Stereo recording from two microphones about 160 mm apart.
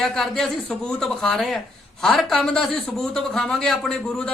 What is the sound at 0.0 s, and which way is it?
A man's voice, centre (ahead or behind).